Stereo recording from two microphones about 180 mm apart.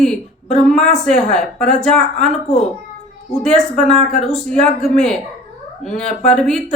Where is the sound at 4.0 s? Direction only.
40° left (ahead or behind).